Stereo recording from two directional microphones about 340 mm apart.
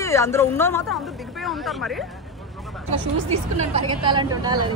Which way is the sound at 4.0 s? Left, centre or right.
Centre.